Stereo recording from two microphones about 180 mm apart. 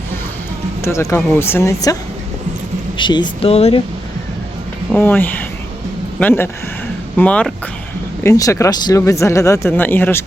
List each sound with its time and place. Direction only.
0.8 s speech: 15° left (ahead or behind)
3.0 s speech: 25° left (ahead or behind)
4.9 s speech: 10° left (ahead or behind)